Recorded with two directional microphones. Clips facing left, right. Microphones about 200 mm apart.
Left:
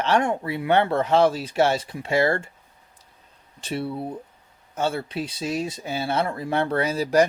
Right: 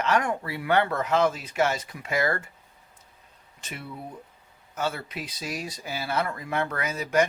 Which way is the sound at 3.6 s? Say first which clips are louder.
Left 11 dB; 30° left (ahead or behind).